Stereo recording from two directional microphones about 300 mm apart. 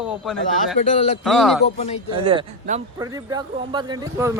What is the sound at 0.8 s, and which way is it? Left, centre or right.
Speech, left.